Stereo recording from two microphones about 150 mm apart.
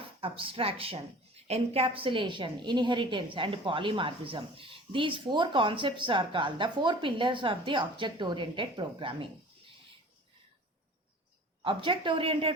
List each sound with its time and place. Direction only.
0.2 s a woman's voice: 35° right (ahead or behind)
11.6 s a woman's voice: 35° right (ahead or behind)